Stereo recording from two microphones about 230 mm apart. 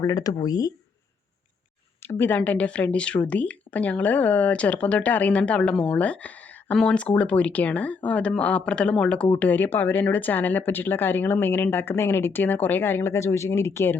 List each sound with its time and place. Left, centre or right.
0.0 s speech: centre
2.0 s speech: centre